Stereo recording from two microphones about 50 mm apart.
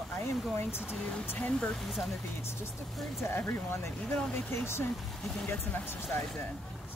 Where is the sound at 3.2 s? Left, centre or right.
Left.